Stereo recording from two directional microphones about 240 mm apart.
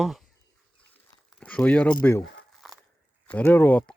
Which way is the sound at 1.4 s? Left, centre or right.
Centre.